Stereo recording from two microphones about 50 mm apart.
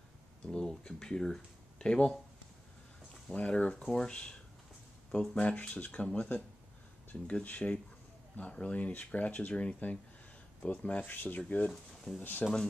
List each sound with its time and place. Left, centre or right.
0.5 s speech: centre
3.3 s speech: left
7.4 s speech: left
11.7 s speech: centre
12.2 s speech: left